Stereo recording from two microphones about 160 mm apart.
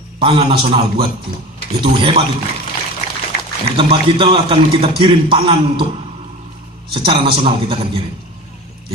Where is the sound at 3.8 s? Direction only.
35° right (ahead or behind).